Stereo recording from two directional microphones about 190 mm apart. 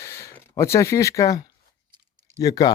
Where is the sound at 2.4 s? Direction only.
20° left (ahead or behind).